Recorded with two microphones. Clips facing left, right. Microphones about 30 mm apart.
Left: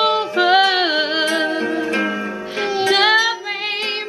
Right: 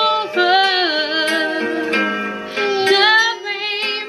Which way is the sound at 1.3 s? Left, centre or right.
Centre.